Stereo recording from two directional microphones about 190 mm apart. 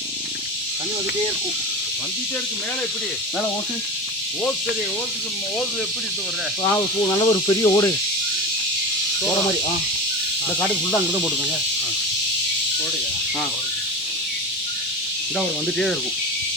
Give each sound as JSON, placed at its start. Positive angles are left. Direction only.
{"t": 7.2, "sound": "speech", "side_deg": 25}
{"t": 15.4, "sound": "speech", "side_deg": 0}